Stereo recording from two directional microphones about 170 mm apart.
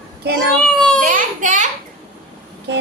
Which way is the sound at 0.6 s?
5° left (ahead or behind).